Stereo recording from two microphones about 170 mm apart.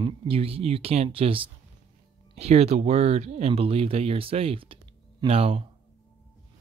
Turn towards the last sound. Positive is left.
turn(degrees=-35)  # may be behind; listen again after turning